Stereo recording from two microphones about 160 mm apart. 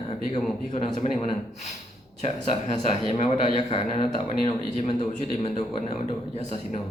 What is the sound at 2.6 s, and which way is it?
Speech, 40° left (ahead or behind).